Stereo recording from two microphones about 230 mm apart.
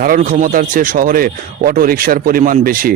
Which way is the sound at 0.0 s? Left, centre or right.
Right.